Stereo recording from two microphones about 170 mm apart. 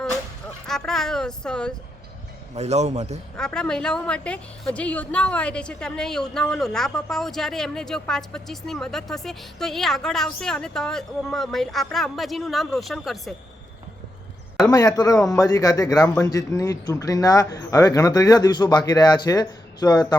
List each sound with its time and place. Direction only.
0.7 s speech: centre (ahead or behind)
2.6 s a man's voice: 40° right (ahead or behind)
3.3 s a woman's voice: 5° left (ahead or behind)
14.7 s speech: 20° left (ahead or behind)